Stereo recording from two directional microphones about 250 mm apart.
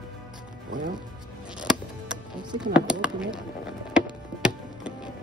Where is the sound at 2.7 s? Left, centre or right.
Centre.